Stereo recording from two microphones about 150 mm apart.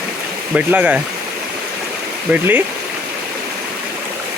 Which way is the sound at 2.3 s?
10° right (ahead or behind).